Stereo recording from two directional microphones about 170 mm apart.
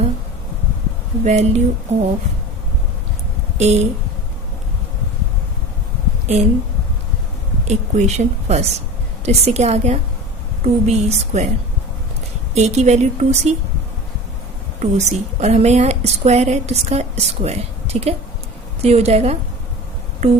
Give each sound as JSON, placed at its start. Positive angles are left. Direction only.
{"t": 1.2, "sound": "a woman's voice", "side_deg": -40}
{"t": 3.6, "sound": "a woman's voice", "side_deg": -40}
{"t": 7.7, "sound": "a woman's voice", "side_deg": -40}
{"t": 12.5, "sound": "a woman's voice", "side_deg": -40}
{"t": 14.8, "sound": "a woman's voice", "side_deg": -40}